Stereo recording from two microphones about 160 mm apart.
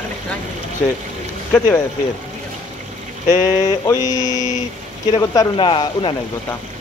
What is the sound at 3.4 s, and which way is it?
Speech, 20° left (ahead or behind).